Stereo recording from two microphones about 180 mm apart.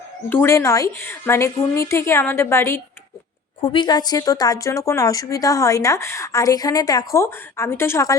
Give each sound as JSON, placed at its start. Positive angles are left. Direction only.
{"t": 0.3, "sound": "a woman's voice", "side_deg": 15}
{"t": 3.6, "sound": "a woman's voice", "side_deg": 25}